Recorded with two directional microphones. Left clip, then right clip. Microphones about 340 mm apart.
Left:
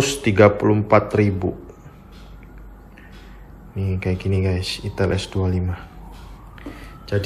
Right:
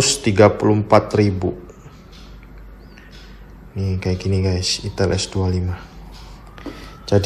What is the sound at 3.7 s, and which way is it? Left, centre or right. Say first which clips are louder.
Speech: right 1 dB; centre.